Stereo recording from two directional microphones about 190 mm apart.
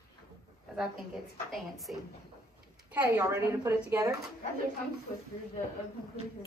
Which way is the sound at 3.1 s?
15° right (ahead or behind).